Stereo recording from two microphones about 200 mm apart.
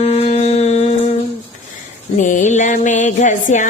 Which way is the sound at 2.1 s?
40° left (ahead or behind).